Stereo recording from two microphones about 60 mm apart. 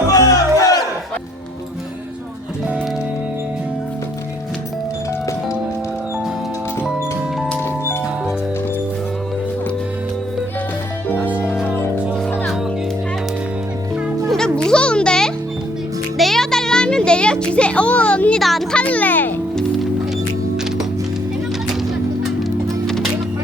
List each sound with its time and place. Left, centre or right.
0.1 s music: left
14.3 s music: centre
18.3 s a sound: centre
18.7 s music: left
22.4 s music: centre